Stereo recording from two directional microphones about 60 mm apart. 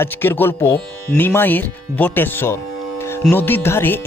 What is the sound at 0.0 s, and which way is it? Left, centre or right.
Speech, left.